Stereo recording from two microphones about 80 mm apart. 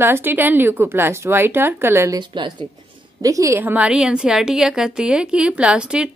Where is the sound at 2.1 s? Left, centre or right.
Right.